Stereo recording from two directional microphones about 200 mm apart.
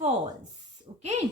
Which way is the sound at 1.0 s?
35° right (ahead or behind).